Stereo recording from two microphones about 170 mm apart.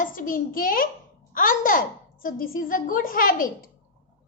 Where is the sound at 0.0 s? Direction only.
50° left (ahead or behind).